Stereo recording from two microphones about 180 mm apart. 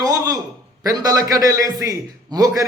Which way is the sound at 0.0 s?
20° right (ahead or behind).